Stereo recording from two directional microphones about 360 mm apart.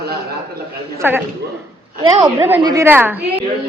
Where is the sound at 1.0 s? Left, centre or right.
Centre.